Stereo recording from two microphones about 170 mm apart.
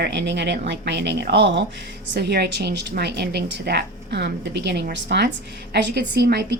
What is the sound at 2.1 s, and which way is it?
A woman's voice, 75° right (ahead or behind).